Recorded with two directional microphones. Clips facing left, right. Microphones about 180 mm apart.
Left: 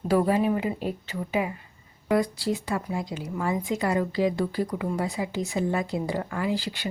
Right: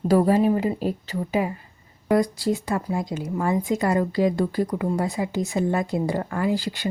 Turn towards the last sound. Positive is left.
turn(degrees=-45)  # may be behind; listen again after turning